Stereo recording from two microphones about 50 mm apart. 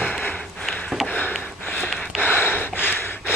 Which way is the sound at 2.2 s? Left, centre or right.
Left.